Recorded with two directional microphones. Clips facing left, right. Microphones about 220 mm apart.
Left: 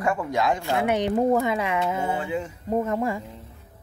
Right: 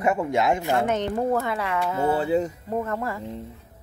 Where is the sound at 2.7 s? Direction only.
20° left (ahead or behind).